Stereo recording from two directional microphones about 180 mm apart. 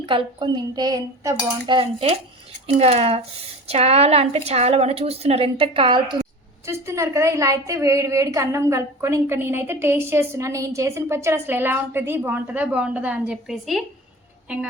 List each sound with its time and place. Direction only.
0.0 s cutlery: 25° right (ahead or behind)
2.6 s a woman's voice: 35° right (ahead or behind)
6.7 s a woman's voice: 15° right (ahead or behind)